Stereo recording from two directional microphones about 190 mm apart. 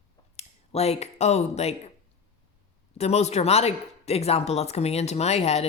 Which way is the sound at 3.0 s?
35° left (ahead or behind).